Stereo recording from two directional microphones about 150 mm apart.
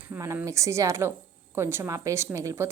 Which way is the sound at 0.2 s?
20° right (ahead or behind).